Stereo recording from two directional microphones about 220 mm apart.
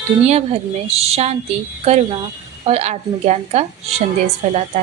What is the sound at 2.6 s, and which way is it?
Speech, 30° right (ahead or behind).